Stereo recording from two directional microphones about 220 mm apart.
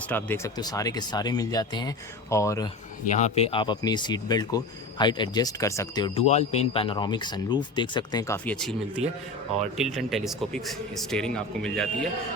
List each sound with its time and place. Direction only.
0.1 s speech: 10° left (ahead or behind)
3.1 s speech: 30° left (ahead or behind)
6.2 s speech: 30° left (ahead or behind); by 11.9 s 5° left (ahead or behind)